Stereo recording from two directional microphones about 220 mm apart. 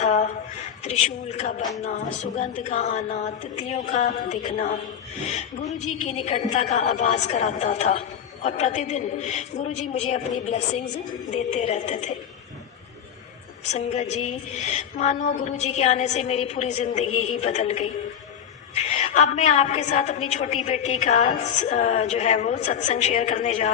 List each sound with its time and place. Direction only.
0.0 s a sound: 35° left (ahead or behind)
1.8 s a woman's voice: 30° left (ahead or behind)
13.7 s a woman's voice: 30° left (ahead or behind)